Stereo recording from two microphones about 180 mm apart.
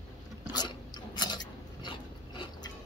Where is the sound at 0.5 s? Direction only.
25° left (ahead or behind).